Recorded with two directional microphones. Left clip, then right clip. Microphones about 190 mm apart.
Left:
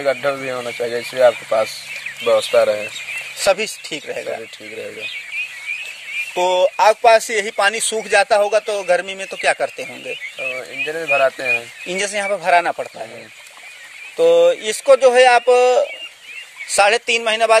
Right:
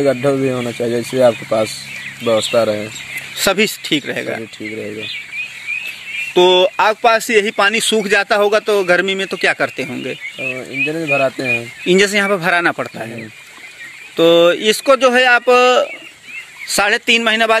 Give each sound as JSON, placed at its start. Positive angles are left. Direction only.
{"t": 0.0, "sound": "speech", "side_deg": -15}
{"t": 2.2, "sound": "speech", "side_deg": 10}
{"t": 6.3, "sound": "speech", "side_deg": 10}
{"t": 14.1, "sound": "speech", "side_deg": 5}